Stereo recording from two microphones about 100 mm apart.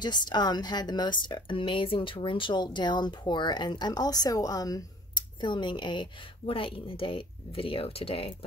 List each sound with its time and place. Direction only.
0.0 s speech: 45° left (ahead or behind)
5.4 s a woman's voice: 50° left (ahead or behind); by 8.5 s 70° left (ahead or behind)